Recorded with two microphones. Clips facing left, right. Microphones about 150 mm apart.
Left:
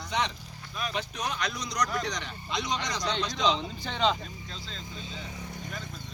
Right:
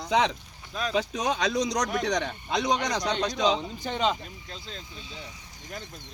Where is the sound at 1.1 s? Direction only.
90° right.